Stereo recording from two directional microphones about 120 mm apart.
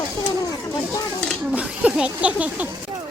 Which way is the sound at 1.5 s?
10° right (ahead or behind).